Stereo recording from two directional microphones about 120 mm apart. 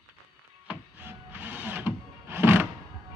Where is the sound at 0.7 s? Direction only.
15° right (ahead or behind).